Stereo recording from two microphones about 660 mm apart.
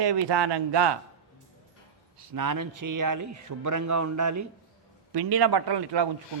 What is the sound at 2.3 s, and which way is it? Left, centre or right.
A man's voice, right.